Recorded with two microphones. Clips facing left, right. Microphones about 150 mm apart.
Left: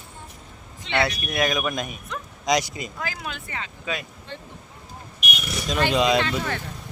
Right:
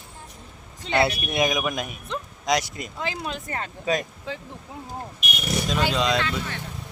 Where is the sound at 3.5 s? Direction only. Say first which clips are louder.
Right 7 dB; 45° right (ahead or behind).